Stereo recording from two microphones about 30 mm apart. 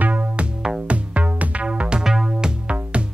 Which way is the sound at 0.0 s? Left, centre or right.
Right.